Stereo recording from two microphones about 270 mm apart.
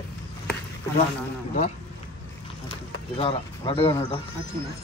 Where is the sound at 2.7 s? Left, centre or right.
Centre.